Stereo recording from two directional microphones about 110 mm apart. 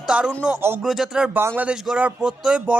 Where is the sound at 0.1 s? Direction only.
10° right (ahead or behind).